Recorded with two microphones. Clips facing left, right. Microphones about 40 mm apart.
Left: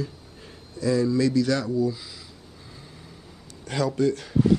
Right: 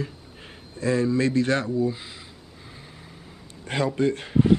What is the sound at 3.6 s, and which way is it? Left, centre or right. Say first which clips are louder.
Speech: even; right.